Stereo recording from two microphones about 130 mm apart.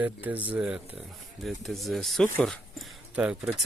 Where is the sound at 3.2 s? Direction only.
10° right (ahead or behind).